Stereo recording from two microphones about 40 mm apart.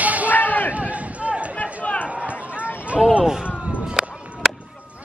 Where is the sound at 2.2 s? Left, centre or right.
Right.